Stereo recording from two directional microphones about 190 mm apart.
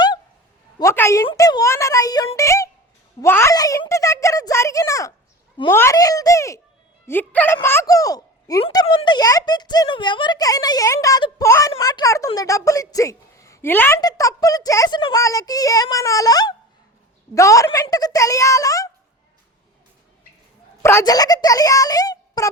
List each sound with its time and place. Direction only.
0.8 s a sound: 15° left (ahead or behind)
1.3 s a woman's voice: 20° left (ahead or behind)
20.8 s speech: 15° left (ahead or behind)